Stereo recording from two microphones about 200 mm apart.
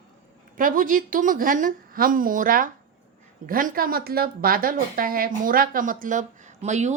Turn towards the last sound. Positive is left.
turn(degrees=-35)  # may be behind; listen again after turning